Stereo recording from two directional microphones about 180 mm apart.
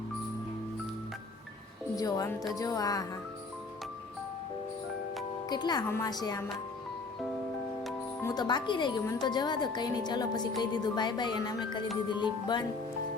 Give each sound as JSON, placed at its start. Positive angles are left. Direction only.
{"t": 2.0, "sound": "speech", "side_deg": 20}
{"t": 5.5, "sound": "speech", "side_deg": 25}
{"t": 8.2, "sound": "speech", "side_deg": 20}